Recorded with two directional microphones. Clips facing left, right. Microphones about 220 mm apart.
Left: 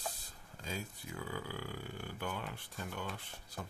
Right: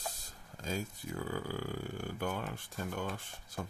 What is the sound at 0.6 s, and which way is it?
Speech, 45° right (ahead or behind).